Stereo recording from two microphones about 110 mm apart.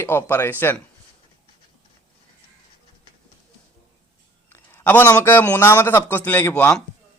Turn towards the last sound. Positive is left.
turn(degrees=10)  # may be behind; listen again after turning